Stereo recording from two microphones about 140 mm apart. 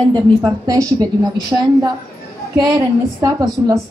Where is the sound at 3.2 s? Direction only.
25° right (ahead or behind).